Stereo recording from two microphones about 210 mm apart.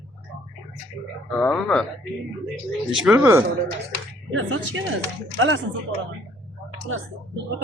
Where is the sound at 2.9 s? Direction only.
Centre (ahead or behind).